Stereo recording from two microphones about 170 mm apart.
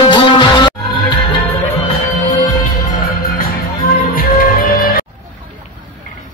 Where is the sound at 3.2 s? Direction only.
60° left (ahead or behind).